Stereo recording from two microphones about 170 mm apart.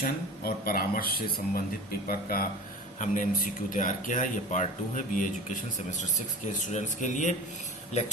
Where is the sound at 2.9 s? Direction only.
50° left (ahead or behind).